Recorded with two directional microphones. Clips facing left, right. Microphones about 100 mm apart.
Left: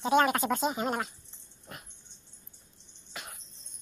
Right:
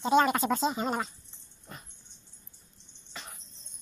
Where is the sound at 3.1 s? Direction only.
10° left (ahead or behind).